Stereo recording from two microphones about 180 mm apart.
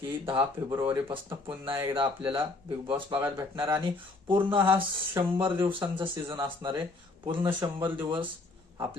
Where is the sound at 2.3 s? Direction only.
25° right (ahead or behind).